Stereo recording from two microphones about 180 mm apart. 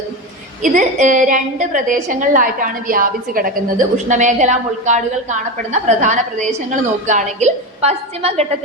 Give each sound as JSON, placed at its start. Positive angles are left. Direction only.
{"t": 0.6, "sound": "a woman's voice", "side_deg": -45}